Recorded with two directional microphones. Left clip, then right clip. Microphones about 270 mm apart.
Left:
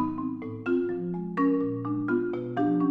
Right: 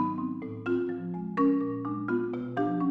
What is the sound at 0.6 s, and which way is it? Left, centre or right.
Music, centre.